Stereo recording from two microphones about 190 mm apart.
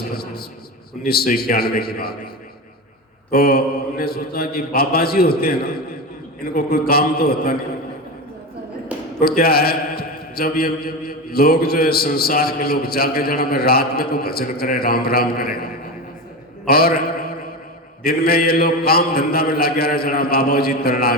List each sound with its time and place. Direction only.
1.0 s a man's voice: 55° left (ahead or behind)
3.3 s a man's voice: 50° left (ahead or behind)
8.9 s a sound: 5° right (ahead or behind)
9.2 s a man's voice: 55° left (ahead or behind)
16.6 s a man's voice: 55° left (ahead or behind)